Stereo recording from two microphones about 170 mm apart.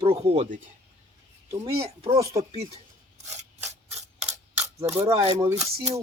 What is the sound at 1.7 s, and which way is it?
Speech, 35° right (ahead or behind).